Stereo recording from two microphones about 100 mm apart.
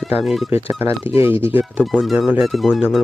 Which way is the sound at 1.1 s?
25° right (ahead or behind).